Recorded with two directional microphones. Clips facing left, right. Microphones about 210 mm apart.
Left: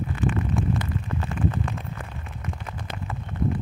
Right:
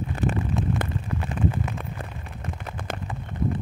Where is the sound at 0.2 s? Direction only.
40° right (ahead or behind).